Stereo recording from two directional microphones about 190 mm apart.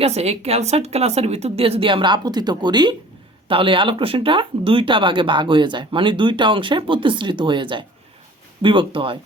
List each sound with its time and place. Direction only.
0.0 s a woman's voice: 35° right (ahead or behind)